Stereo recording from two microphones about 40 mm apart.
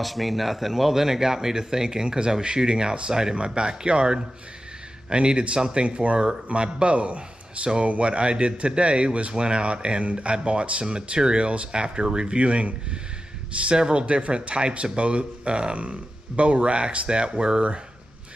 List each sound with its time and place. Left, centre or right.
0.0 s speech: centre; by 17.7 s right